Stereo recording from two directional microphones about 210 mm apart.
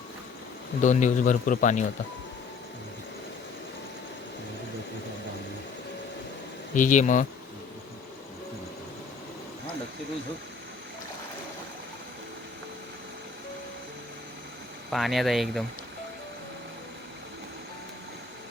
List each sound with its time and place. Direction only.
0.8 s a man's voice: 35° left (ahead or behind)
6.7 s a man's voice: 35° left (ahead or behind)
14.8 s speech: centre (ahead or behind)